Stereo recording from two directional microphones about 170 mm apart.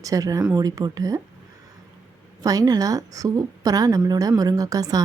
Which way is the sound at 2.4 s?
20° right (ahead or behind).